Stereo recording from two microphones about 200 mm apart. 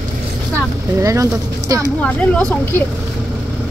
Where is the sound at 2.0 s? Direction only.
5° left (ahead or behind).